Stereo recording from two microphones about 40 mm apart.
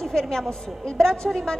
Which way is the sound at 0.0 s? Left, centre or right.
Centre.